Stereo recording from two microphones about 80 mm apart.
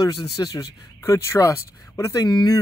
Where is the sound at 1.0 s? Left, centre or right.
Left.